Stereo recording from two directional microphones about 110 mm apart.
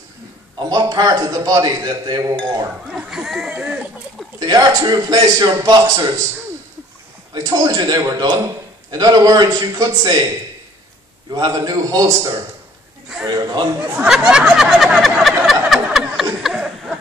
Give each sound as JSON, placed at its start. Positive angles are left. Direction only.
{"t": 0.7, "sound": "a man's voice", "side_deg": -35}
{"t": 2.9, "sound": "speech", "side_deg": -10}
{"t": 4.4, "sound": "a man's voice", "side_deg": -35}
{"t": 7.3, "sound": "a man's voice", "side_deg": -35}
{"t": 11.3, "sound": "a man's voice", "side_deg": -40}
{"t": 14.0, "sound": "a sound", "side_deg": -5}